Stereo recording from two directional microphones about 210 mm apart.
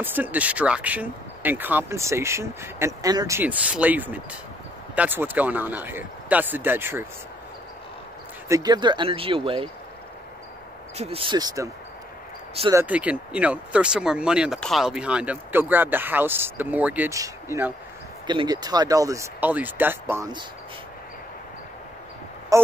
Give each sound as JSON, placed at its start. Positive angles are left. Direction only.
{"t": 0.0, "sound": "speech", "side_deg": -10}
{"t": 8.5, "sound": "speech", "side_deg": -15}
{"t": 11.0, "sound": "speech", "side_deg": -25}
{"t": 12.7, "sound": "speech", "side_deg": -5}
{"t": 22.5, "sound": "speech", "side_deg": -15}